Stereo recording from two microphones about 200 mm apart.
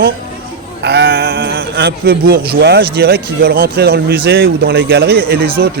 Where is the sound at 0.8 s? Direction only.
55° right (ahead or behind).